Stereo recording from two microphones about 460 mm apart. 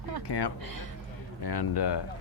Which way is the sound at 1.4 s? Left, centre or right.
Left.